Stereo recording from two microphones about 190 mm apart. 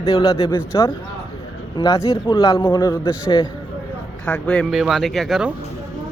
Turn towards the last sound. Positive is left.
turn(degrees=0)  # may be behind; listen again after turning